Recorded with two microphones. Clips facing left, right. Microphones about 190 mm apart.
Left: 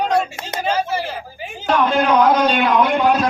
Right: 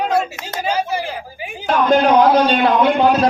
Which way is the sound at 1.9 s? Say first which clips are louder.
Right 4 dB; 35° right (ahead or behind).